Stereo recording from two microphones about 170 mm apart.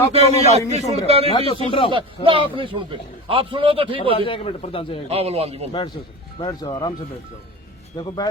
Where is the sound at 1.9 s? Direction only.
30° right (ahead or behind).